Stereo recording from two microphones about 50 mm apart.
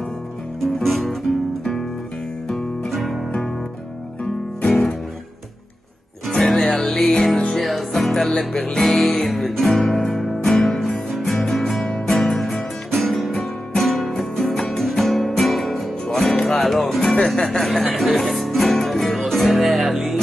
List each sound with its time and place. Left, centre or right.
0.6 s music: centre
2.4 s music: centre
4.6 s music: centre
6.3 s music: centre
7.6 s music: centre
9.1 s music: centre
13.4 s guitar: centre
14.4 s music: centre
16.2 s music: left
16.6 s music: centre